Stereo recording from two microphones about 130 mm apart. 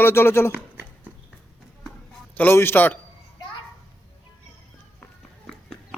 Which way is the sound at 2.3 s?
15° left (ahead or behind).